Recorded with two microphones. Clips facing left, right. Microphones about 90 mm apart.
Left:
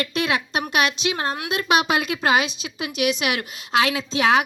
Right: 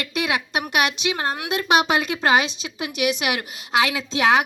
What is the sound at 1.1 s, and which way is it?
Speech, 25° left (ahead or behind).